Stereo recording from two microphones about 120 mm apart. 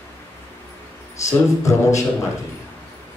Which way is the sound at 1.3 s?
25° left (ahead or behind).